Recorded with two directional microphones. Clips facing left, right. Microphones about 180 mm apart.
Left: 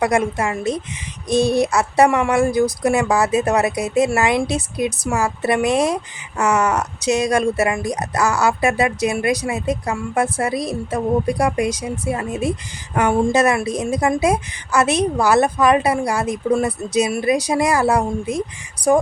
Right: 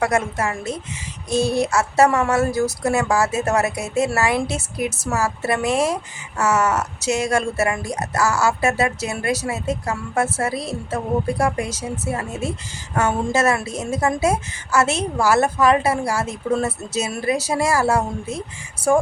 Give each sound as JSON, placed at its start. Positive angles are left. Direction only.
{"t": 0.0, "sound": "speech", "side_deg": 15}